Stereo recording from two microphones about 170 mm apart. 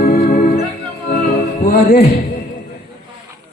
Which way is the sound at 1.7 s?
65° left (ahead or behind).